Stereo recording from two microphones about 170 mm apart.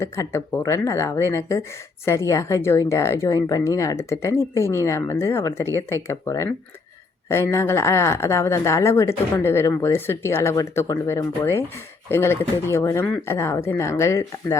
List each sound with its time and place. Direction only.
0.0 s speech: 15° left (ahead or behind)